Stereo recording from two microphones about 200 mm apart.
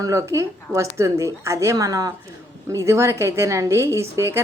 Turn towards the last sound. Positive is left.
turn(degrees=-15)  # may be behind; listen again after turning